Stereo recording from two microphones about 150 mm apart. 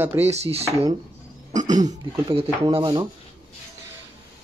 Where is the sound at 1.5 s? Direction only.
55° right (ahead or behind).